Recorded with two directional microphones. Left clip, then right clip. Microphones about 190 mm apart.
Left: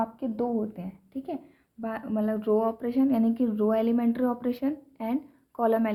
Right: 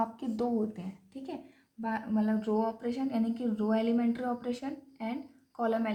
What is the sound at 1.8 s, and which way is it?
Speech, 55° left (ahead or behind).